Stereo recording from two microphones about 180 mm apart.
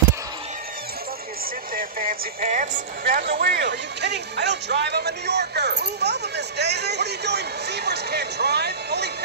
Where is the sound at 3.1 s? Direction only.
70° right (ahead or behind).